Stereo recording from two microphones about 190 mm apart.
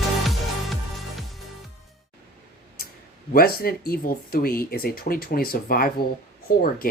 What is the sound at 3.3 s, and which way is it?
Speech, 50° left (ahead or behind).